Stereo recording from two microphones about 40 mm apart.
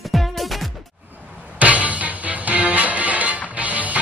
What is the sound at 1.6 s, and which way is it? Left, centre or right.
Music, right.